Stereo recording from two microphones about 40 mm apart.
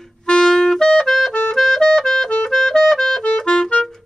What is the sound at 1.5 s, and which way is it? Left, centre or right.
Music, centre.